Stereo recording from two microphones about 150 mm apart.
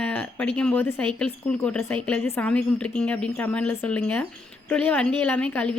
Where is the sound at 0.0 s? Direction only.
10° left (ahead or behind).